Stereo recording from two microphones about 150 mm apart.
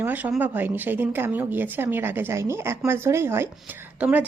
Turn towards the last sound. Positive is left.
turn(degrees=-10)  # may be behind; listen again after turning